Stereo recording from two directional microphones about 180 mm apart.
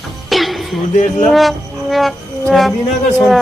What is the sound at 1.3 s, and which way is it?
Music, centre (ahead or behind).